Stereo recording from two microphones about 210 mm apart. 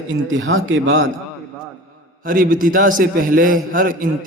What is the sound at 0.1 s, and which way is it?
Speech, 60° right (ahead or behind).